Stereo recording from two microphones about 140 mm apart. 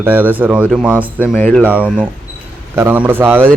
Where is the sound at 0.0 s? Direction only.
15° right (ahead or behind).